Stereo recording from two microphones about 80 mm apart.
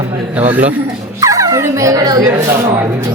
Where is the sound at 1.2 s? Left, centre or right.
Right.